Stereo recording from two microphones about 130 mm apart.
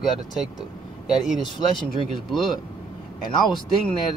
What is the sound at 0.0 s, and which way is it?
Speech, centre (ahead or behind).